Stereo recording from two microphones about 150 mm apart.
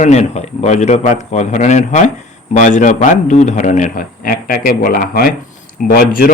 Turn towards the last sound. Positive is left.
turn(degrees=75)  # may be behind; listen again after turning